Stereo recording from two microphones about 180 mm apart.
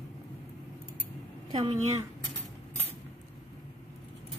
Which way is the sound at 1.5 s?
30° right (ahead or behind).